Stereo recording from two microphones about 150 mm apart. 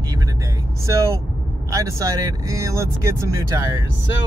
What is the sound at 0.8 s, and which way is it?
Speech, 20° right (ahead or behind).